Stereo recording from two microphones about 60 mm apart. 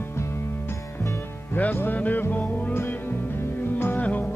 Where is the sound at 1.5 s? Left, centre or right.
Left.